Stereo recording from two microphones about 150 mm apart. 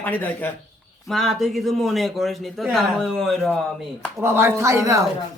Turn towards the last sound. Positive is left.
turn(degrees=-20)  # may be behind; listen again after turning